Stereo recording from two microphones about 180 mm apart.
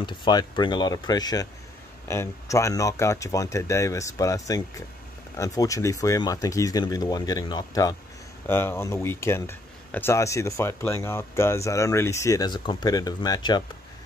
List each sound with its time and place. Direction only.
0.0 s speech: 25° left (ahead or behind)